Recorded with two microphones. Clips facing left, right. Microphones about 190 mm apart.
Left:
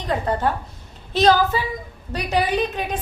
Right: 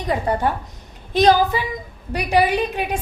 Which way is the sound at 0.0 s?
10° right (ahead or behind).